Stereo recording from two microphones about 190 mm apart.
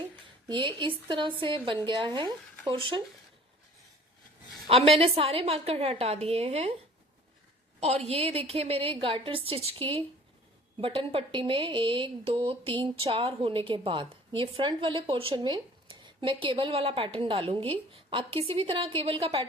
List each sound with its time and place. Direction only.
0.4 s a woman's voice: 25° right (ahead or behind)
4.7 s a woman's voice: 30° right (ahead or behind)
7.8 s a woman's voice: 35° right (ahead or behind)